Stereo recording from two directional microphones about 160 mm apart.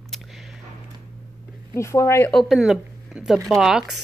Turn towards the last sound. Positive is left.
turn(degrees=-5)  # may be behind; listen again after turning